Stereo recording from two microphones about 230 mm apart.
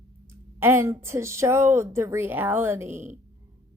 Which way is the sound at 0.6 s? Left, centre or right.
Centre.